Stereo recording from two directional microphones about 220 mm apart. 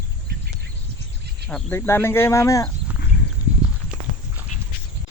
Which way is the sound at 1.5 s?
5° left (ahead or behind).